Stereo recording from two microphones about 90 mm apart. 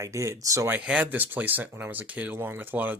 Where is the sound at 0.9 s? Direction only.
15° right (ahead or behind).